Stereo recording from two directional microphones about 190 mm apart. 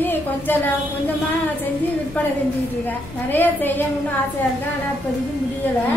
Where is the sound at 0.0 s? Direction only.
10° left (ahead or behind).